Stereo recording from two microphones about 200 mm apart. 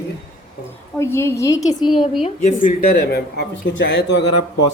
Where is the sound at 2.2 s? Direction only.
40° left (ahead or behind); by 4.2 s 60° left (ahead or behind).